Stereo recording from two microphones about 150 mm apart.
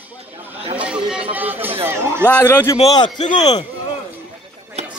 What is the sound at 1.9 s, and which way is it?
Speech, 15° right (ahead or behind).